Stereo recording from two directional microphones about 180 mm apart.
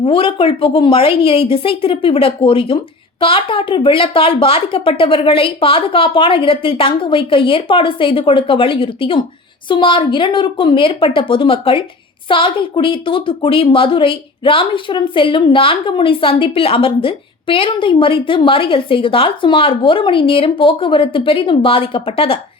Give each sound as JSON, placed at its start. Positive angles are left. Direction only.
{"t": 0.0, "sound": "a woman's voice", "side_deg": 30}